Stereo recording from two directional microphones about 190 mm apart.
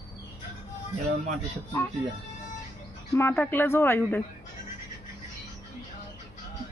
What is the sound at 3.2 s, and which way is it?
Speech, 10° left (ahead or behind).